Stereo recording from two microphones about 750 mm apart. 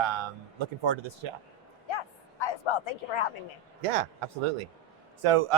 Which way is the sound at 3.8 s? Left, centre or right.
Right.